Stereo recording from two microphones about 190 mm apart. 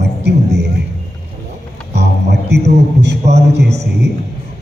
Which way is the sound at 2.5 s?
60° right (ahead or behind).